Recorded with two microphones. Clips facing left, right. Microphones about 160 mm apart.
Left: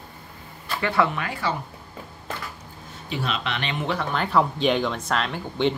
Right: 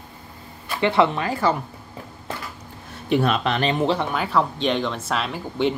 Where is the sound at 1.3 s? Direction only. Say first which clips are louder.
Right 6 dB; 45° right (ahead or behind).